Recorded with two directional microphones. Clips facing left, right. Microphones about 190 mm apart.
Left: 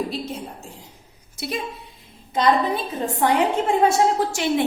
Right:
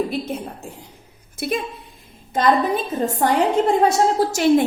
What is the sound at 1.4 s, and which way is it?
Speech, 55° right (ahead or behind).